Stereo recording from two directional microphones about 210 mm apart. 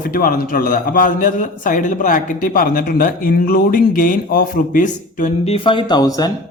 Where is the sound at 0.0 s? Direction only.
40° left (ahead or behind); by 6.3 s 20° left (ahead or behind).